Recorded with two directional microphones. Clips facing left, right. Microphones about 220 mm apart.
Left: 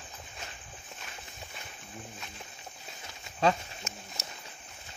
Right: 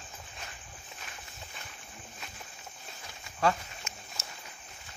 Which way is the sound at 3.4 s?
20° left (ahead or behind).